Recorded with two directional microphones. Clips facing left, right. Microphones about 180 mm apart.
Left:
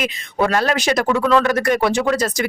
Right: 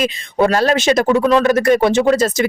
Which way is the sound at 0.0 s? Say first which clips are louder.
Right 4 dB; 25° right (ahead or behind).